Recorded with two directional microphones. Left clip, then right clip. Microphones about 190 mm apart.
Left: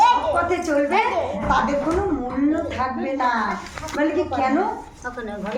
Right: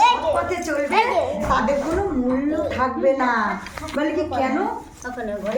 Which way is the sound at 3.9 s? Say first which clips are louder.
Left 1 dB; 5° right (ahead or behind).